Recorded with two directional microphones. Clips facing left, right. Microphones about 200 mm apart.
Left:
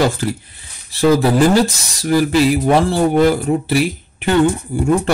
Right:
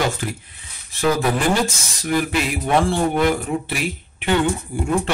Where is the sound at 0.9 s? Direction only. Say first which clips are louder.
Left 7 dB; 35° left (ahead or behind).